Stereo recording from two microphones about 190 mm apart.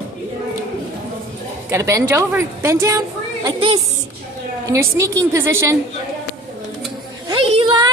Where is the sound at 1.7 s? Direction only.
15° right (ahead or behind).